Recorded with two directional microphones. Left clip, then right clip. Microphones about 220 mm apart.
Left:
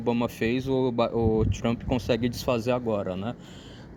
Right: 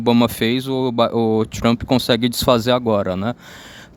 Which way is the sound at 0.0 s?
40° right (ahead or behind).